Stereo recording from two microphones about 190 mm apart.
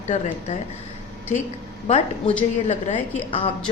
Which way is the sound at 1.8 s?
35° left (ahead or behind).